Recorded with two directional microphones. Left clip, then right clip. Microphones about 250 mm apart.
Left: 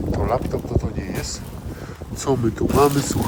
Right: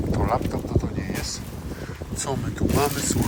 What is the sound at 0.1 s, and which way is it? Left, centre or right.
Boat, left.